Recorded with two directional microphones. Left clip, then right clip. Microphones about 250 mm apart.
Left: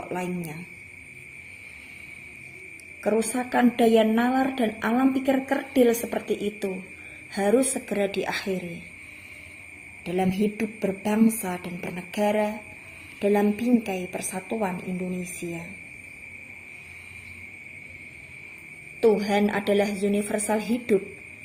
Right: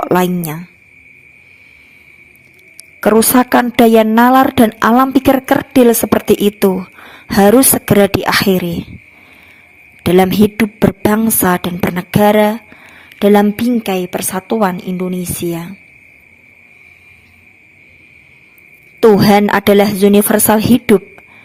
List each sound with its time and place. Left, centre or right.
0.1 s a woman's voice: right
3.0 s a woman's voice: right
10.0 s a woman's voice: right
18.9 s a woman's voice: right